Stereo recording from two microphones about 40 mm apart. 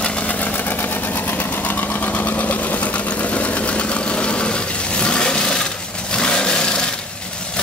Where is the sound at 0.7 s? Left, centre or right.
Left.